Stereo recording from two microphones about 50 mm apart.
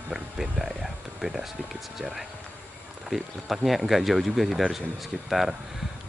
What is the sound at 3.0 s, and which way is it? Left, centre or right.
Speech, centre.